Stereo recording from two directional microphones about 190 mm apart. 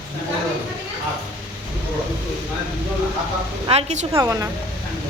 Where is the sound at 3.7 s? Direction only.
35° right (ahead or behind).